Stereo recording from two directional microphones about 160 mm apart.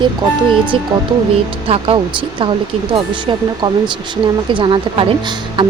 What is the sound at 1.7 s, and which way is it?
A woman's voice, 35° right (ahead or behind).